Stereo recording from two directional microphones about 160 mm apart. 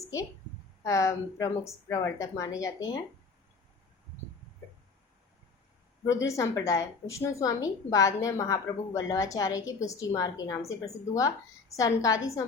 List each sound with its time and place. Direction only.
0.9 s a woman's voice: 20° left (ahead or behind)
6.1 s a woman's voice: 20° left (ahead or behind)